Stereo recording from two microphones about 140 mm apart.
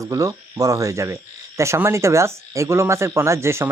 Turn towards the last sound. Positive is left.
turn(degrees=-20)  # may be behind; listen again after turning